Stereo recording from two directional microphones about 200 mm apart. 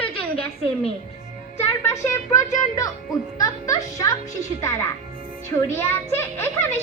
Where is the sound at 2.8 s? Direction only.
15° left (ahead or behind).